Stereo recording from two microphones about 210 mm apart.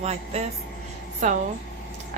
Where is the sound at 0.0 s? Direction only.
30° right (ahead or behind).